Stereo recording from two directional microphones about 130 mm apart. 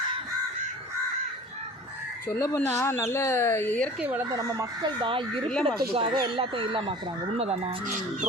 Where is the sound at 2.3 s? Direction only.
20° left (ahead or behind).